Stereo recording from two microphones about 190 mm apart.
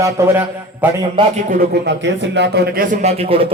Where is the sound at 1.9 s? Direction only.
65° right (ahead or behind).